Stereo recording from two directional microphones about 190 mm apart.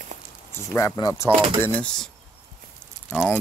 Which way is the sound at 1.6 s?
5° left (ahead or behind).